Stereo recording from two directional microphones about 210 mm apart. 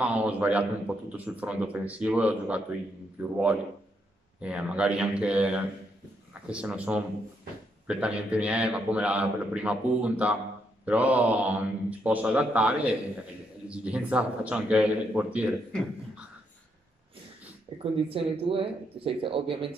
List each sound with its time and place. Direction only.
0.0 s a man's voice: 5° right (ahead or behind)
17.7 s speech: 25° right (ahead or behind)